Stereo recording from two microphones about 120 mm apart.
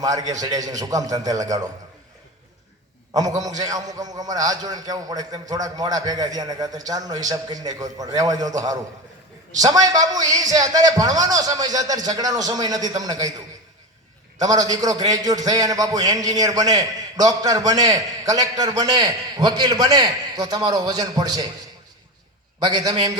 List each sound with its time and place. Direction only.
0.0 s a man's voice: 30° right (ahead or behind)
3.1 s a man's voice: 30° right (ahead or behind)
14.3 s a man's voice: 30° right (ahead or behind)
22.6 s a man's voice: 30° right (ahead or behind)